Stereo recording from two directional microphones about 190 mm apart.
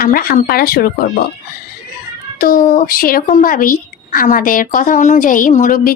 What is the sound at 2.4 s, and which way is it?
A woman's voice, 50° left (ahead or behind).